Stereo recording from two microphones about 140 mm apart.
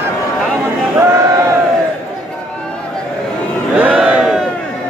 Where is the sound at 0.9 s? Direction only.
20° right (ahead or behind).